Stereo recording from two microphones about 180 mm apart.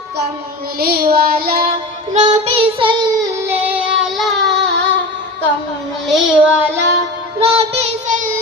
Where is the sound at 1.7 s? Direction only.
40° right (ahead or behind); by 3.5 s 20° right (ahead or behind).